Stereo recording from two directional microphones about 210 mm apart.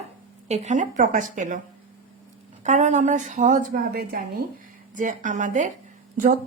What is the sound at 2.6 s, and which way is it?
Speech, 35° right (ahead or behind).